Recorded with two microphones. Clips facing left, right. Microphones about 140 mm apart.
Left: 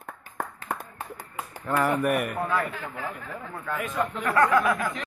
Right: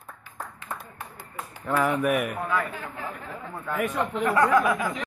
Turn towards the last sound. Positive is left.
turn(degrees=-10)  # may be behind; listen again after turning